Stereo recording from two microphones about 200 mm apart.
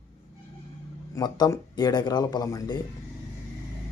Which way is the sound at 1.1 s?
20° left (ahead or behind).